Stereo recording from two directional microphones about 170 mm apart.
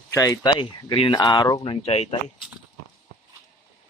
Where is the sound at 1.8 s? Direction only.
35° left (ahead or behind).